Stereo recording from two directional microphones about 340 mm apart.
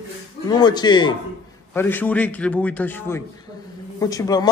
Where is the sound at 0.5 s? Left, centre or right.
Centre.